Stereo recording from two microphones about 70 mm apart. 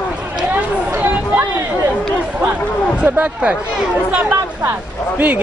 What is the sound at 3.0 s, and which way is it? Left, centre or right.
Speech, centre.